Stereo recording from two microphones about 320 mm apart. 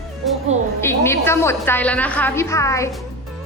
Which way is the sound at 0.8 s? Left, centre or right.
Centre.